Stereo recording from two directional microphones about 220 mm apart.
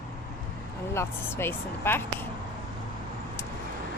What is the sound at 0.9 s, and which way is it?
Speech, 10° left (ahead or behind).